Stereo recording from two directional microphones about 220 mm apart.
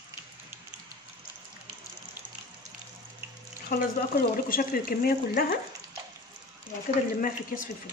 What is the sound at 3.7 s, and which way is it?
Speech, 45° left (ahead or behind).